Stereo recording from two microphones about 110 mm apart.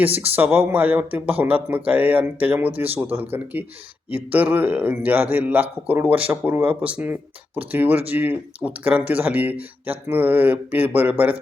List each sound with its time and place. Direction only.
0.0 s a man's voice: 15° right (ahead or behind)